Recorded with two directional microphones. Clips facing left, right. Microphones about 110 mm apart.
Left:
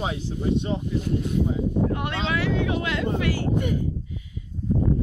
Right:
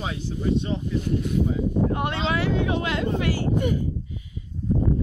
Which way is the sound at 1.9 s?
30° right (ahead or behind).